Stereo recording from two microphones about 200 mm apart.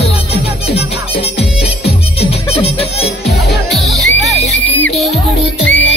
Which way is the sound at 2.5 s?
30° left (ahead or behind).